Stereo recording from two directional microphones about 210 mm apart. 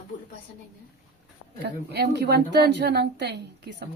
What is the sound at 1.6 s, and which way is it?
A woman's voice, 55° right (ahead or behind).